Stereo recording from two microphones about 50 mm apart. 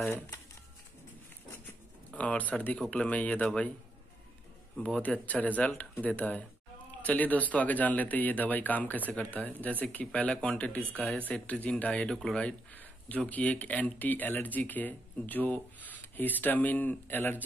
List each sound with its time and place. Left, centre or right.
2.0 s speech: left
5.0 s speech: left
12.1 s speech: centre
12.7 s speech: left